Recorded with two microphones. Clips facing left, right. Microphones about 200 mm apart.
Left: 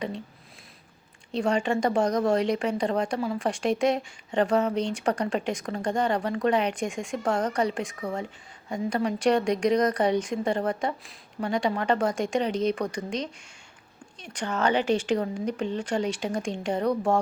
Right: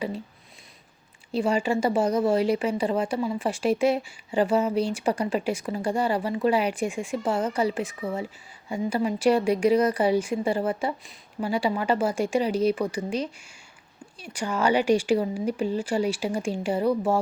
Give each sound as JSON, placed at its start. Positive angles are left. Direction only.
{"t": 1.3, "sound": "speech", "side_deg": -5}